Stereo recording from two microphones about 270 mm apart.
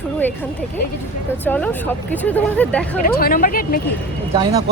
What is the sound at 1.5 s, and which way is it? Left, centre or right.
Speech, centre.